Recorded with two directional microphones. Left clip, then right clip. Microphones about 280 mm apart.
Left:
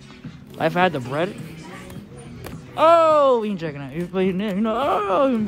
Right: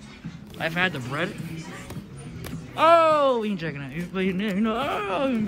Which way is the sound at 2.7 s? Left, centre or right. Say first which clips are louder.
Left 3 dB; centre.